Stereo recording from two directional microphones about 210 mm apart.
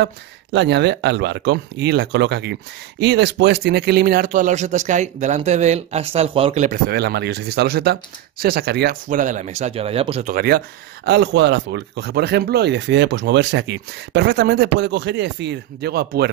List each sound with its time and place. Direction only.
0.0 s speech: 55° right (ahead or behind); by 6.8 s 35° right (ahead or behind)
6.9 s speech: 50° right (ahead or behind); by 10.2 s 30° right (ahead or behind)
10.2 s speech: 45° right (ahead or behind)